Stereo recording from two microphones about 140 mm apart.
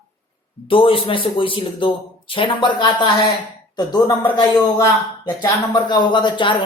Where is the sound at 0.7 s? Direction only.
40° left (ahead or behind).